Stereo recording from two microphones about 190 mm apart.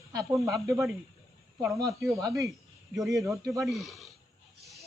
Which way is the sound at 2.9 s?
Centre (ahead or behind).